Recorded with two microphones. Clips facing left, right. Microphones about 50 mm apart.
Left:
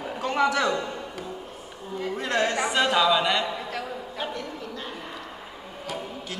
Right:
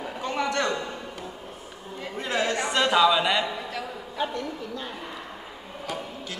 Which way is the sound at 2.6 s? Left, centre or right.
Centre.